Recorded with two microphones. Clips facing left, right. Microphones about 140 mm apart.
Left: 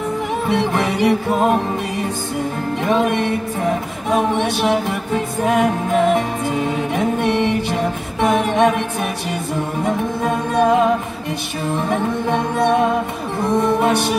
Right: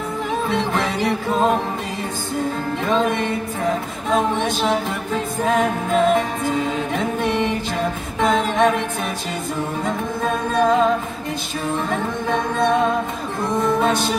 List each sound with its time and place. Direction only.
0.5 s music: 15° left (ahead or behind)
2.8 s music: 10° left (ahead or behind)
9.8 s music: 10° left (ahead or behind)
11.9 s music: 15° left (ahead or behind)